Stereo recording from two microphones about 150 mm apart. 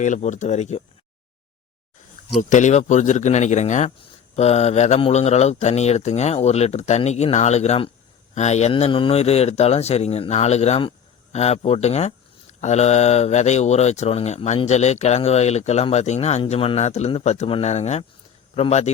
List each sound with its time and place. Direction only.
0.0 s speech: 55° left (ahead or behind)
2.4 s speech: 55° left (ahead or behind)
8.7 s speech: 35° left (ahead or behind)